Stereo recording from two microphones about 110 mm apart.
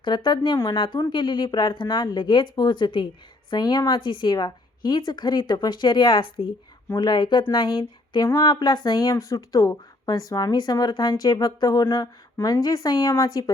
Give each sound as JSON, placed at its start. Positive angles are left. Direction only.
{"t": 0.0, "sound": "speech", "side_deg": 45}
{"t": 11.9, "sound": "speech", "side_deg": 30}